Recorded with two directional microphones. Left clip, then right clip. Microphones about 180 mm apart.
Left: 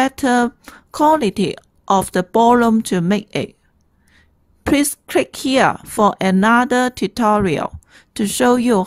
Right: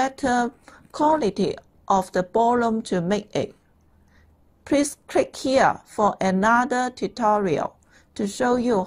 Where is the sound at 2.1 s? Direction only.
35° left (ahead or behind).